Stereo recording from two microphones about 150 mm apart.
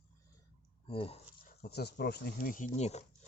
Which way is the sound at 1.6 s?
90° left.